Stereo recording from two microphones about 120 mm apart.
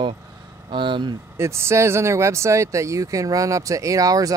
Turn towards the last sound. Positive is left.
turn(degrees=-30)  # may be behind; listen again after turning